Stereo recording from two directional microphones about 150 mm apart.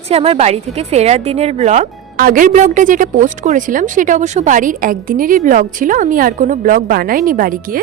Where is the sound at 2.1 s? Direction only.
70° right (ahead or behind).